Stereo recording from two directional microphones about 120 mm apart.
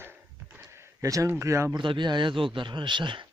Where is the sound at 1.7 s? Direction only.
40° right (ahead or behind).